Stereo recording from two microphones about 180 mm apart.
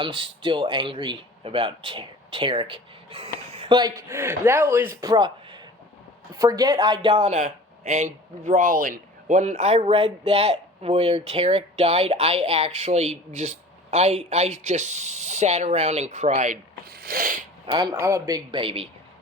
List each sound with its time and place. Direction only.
0.0 s speech: 25° right (ahead or behind)
4.9 s speech: 20° right (ahead or behind); by 16.6 s 40° right (ahead or behind)
16.9 s a sound: 55° right (ahead or behind)
17.9 s speech: 15° right (ahead or behind)